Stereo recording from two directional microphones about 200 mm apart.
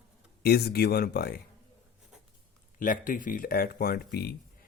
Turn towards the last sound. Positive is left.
turn(degrees=50)  # may be behind; listen again after turning